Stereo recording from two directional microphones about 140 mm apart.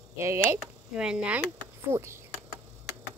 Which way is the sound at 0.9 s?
5° right (ahead or behind).